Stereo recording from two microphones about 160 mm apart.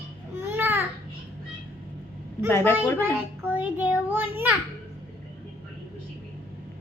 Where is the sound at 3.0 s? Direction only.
10° right (ahead or behind).